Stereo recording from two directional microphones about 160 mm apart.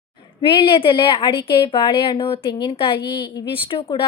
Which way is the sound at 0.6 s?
35° left (ahead or behind).